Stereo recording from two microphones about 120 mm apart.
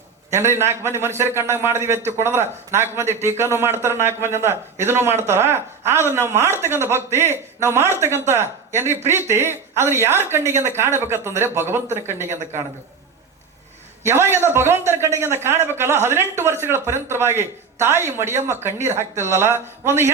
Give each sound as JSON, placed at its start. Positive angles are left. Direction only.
{"t": 0.3, "sound": "a man's voice", "side_deg": -20}
{"t": 14.0, "sound": "a man's voice", "side_deg": -20}